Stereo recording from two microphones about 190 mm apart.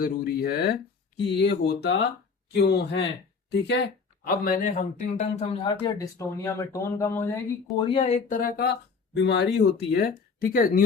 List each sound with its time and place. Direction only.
0.0 s speech: 55° left (ahead or behind)
4.3 s a man's voice: 50° left (ahead or behind); by 5.7 s 30° left (ahead or behind)
5.8 s speech: 15° left (ahead or behind); by 8.7 s 55° left (ahead or behind)
9.1 s speech: 65° left (ahead or behind); by 10.8 s 50° left (ahead or behind)